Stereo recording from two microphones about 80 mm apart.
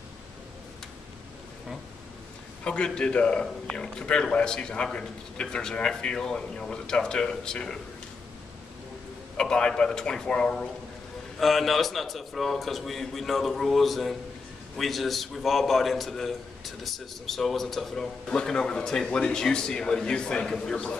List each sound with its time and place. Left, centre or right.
2.6 s a man's voice: centre
9.4 s a man's voice: centre